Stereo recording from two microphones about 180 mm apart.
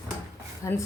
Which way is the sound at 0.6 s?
15° left (ahead or behind).